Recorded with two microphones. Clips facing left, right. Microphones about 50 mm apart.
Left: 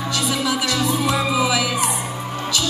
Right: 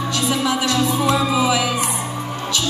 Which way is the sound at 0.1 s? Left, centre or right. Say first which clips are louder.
Right 1 dB; right.